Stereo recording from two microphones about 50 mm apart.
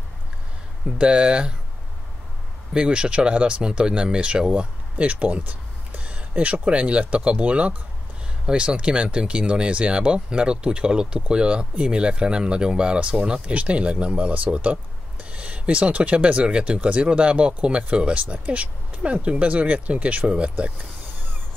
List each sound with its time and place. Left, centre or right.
0.9 s speech: right
2.7 s speech: centre